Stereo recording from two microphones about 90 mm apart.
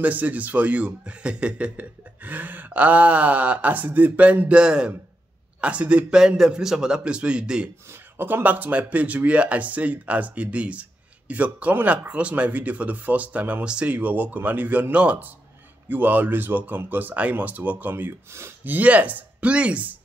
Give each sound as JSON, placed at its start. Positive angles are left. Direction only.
{"t": 0.0, "sound": "speech", "side_deg": -20}
{"t": 7.9, "sound": "speech", "side_deg": -25}